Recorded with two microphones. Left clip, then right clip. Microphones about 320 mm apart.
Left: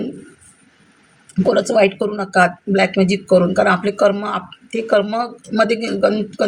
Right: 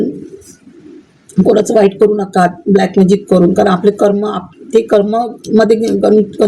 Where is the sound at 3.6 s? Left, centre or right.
Left.